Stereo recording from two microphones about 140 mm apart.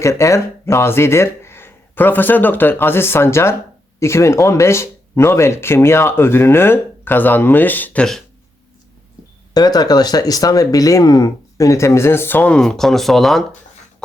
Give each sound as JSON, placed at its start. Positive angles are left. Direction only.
{"t": 0.0, "sound": "speech", "side_deg": 20}
{"t": 9.6, "sound": "speech", "side_deg": 30}